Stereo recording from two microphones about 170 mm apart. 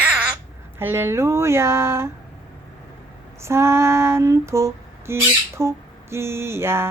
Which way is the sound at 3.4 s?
15° right (ahead or behind).